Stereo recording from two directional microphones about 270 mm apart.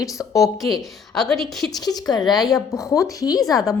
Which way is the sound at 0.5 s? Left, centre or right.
Centre.